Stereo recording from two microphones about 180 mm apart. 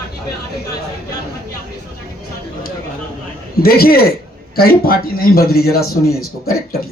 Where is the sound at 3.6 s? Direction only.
55° left (ahead or behind).